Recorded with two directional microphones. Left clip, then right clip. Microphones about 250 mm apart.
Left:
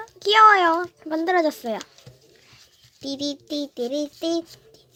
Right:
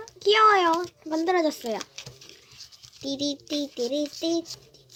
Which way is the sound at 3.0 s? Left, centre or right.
Centre.